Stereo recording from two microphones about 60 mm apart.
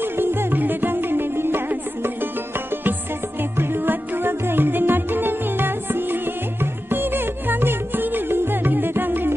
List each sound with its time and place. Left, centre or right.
0.0 s music: right
3.5 s music: right